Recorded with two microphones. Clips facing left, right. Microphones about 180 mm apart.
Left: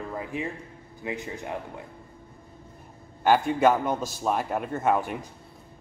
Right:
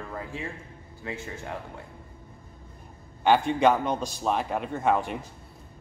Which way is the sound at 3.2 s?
5° left (ahead or behind).